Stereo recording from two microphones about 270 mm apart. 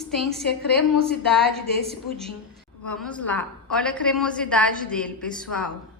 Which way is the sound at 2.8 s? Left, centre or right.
Centre.